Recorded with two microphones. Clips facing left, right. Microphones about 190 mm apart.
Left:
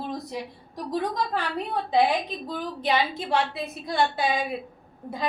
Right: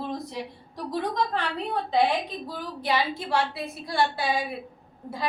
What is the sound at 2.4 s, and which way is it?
A woman's voice, 20° left (ahead or behind).